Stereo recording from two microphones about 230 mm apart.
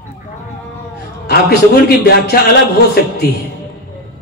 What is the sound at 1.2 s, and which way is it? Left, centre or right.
A man's voice, left.